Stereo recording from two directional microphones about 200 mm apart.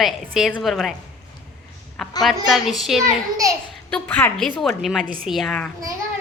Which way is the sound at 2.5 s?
Centre (ahead or behind).